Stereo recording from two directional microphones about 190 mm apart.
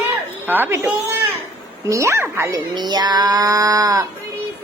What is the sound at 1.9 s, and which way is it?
A woman's voice, 15° right (ahead or behind).